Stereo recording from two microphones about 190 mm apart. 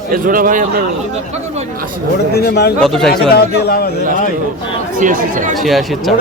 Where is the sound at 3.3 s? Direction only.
55° left (ahead or behind).